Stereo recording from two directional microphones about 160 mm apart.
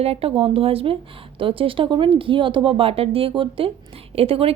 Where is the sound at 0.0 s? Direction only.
40° right (ahead or behind).